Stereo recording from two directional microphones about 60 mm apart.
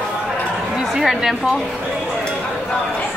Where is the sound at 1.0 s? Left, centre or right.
Centre.